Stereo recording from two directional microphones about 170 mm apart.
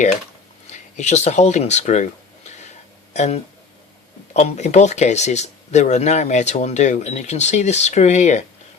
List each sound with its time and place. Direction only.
0.7 s speech: 40° left (ahead or behind)